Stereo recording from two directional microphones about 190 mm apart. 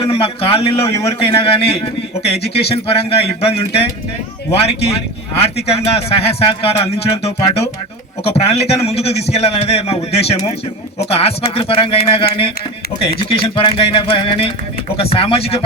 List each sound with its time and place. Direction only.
0.0 s a man's voice: 30° left (ahead or behind)
5.4 s a man's voice: 30° left (ahead or behind)